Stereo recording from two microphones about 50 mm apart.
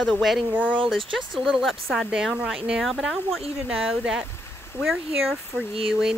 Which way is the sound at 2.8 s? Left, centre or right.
Centre.